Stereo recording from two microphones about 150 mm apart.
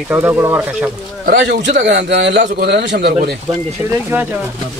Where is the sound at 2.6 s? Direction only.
90° right.